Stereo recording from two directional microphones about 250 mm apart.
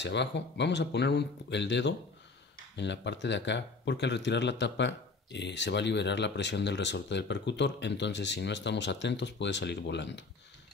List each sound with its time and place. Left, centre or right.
0.0 s speech: left